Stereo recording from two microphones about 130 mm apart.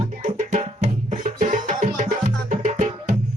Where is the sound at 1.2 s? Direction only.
80° right.